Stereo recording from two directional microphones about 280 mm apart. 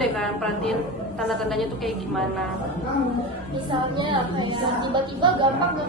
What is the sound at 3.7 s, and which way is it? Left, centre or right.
A woman's voice, centre.